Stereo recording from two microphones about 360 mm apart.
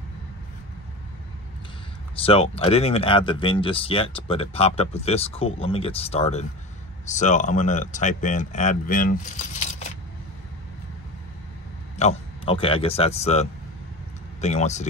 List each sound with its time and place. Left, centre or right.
2.1 s speech: centre
12.0 s speech: centre